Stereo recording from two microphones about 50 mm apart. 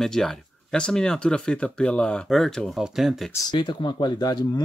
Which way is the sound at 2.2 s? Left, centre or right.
Centre.